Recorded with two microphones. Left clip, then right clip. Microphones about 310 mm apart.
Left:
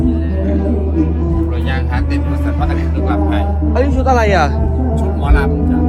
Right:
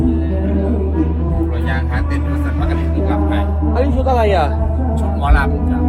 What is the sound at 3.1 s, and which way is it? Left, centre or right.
Music, centre.